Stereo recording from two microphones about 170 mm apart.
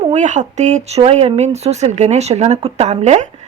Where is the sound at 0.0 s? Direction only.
45° right (ahead or behind).